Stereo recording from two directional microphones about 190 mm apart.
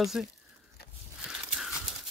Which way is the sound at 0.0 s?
Centre (ahead or behind).